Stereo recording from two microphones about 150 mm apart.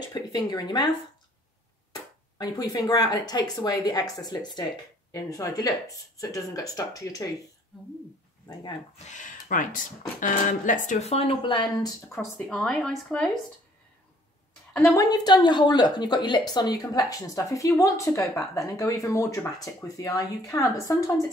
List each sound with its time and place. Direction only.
0.1 s speech: 25° left (ahead or behind)
8.9 s speech: 50° left (ahead or behind); by 12.4 s 20° left (ahead or behind)
12.4 s speech: 5° left (ahead or behind)
15.0 s speech: 25° left (ahead or behind)